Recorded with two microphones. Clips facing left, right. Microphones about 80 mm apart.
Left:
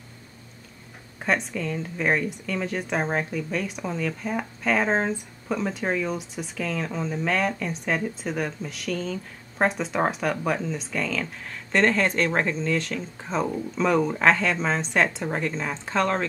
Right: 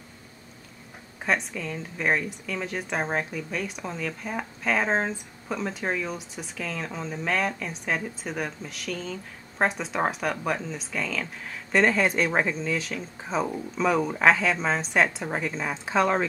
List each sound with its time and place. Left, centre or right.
1.2 s speech: centre